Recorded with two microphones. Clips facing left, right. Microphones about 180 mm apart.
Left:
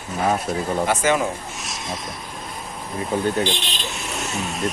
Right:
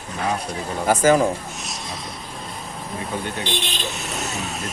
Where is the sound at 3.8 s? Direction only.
Centre (ahead or behind).